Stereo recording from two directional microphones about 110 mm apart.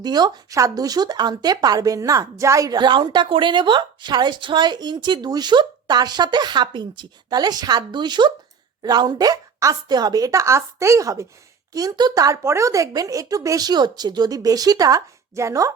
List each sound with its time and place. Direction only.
0.0 s speech: 40° right (ahead or behind)